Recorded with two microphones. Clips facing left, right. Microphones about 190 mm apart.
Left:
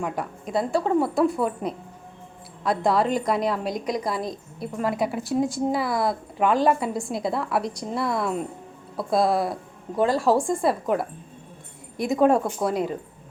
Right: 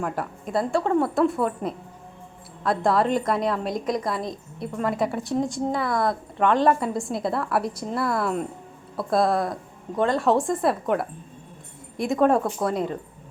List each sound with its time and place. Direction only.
0.0 s a woman's voice: centre (ahead or behind)